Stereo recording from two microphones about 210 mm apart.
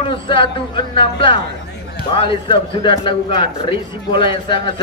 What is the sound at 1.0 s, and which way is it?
A man's voice, 25° left (ahead or behind).